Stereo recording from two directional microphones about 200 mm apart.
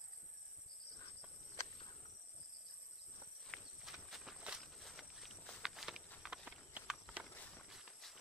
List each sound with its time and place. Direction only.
3.4 s walk: centre (ahead or behind)
7.3 s walk: 5° left (ahead or behind)